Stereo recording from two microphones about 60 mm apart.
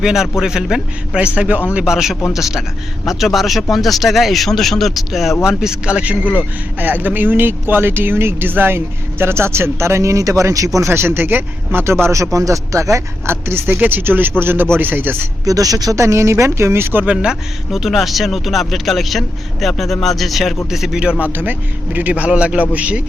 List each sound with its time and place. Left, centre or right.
0.0 s a man's voice: centre
1.8 s a man's voice: centre
5.5 s speech: centre; by 10.7 s right
10.8 s speech: right
12.1 s speech: right
13.2 s speech: right
13.7 s speech: right
15.4 s speech: right
16.0 s speech: right
17.7 s a man's voice: centre
21.2 s speech: right